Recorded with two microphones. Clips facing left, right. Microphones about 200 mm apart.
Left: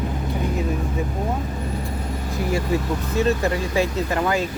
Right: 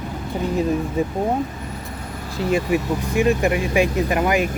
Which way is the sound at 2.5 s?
15° right (ahead or behind).